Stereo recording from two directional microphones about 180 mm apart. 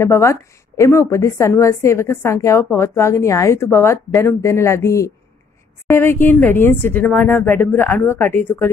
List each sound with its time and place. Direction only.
0.0 s a woman's voice: 15° left (ahead or behind)